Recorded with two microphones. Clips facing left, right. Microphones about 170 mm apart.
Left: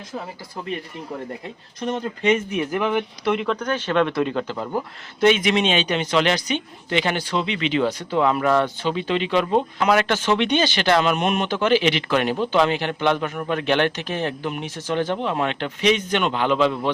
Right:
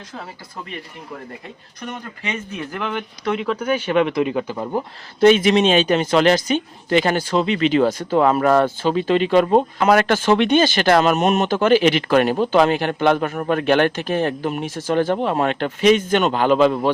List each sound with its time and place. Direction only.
1.9 s speech: 20° left (ahead or behind)
3.3 s speech: 5° right (ahead or behind)
5.2 s a man's voice: 35° right (ahead or behind)